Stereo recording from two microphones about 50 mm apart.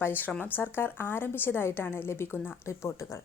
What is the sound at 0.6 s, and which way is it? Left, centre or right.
A woman's voice, left.